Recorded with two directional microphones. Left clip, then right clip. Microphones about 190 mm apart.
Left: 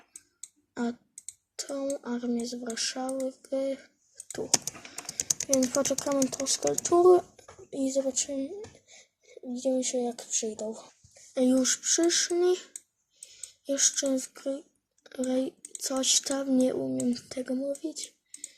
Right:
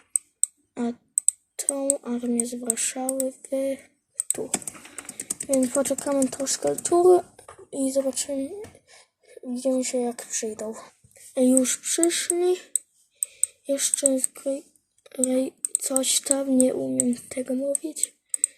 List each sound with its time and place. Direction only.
0.7 s clicking: 10° left (ahead or behind)
1.5 s speech: 5° left (ahead or behind)
4.7 s typing: 40° left (ahead or behind)
5.5 s speech: centre (ahead or behind)
6.8 s a sound: centre (ahead or behind)
9.6 s speech: centre (ahead or behind)
13.7 s speech: 10° left (ahead or behind)